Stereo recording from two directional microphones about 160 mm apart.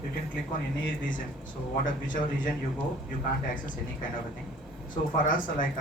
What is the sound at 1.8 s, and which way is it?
Speech, 55° left (ahead or behind).